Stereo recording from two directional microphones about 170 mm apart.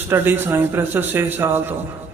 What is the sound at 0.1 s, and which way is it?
A man's voice, 15° right (ahead or behind).